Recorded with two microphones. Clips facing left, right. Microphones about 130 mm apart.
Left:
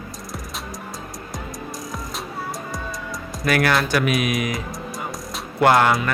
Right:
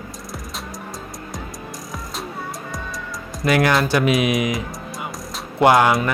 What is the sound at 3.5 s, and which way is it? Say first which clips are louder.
Speech: right 2 dB; 20° right (ahead or behind).